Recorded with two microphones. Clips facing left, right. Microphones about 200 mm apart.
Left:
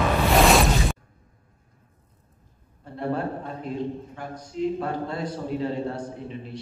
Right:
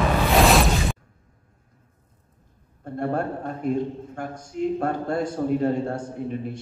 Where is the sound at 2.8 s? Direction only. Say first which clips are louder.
Right 2 dB; 50° right (ahead or behind).